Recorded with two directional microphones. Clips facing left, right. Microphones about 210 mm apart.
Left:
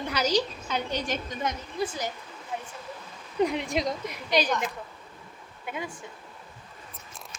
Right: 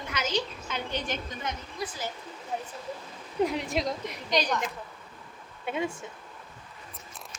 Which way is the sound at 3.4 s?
Centre (ahead or behind).